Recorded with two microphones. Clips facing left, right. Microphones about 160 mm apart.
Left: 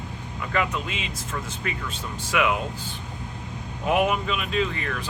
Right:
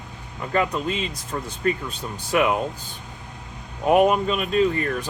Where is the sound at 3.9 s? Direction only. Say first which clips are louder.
Right 5 dB; 40° right (ahead or behind).